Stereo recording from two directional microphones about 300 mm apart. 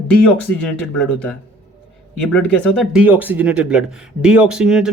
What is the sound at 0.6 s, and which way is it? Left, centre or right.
Speech, centre.